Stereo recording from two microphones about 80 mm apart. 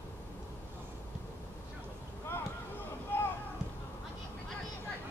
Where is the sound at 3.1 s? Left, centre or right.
Left.